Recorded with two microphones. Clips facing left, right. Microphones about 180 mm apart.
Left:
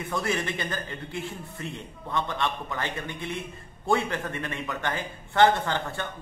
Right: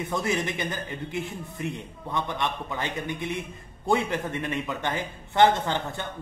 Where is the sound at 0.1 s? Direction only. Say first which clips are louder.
Even; 20° right (ahead or behind).